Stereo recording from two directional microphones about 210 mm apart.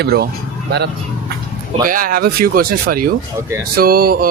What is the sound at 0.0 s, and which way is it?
Speech, 50° right (ahead or behind).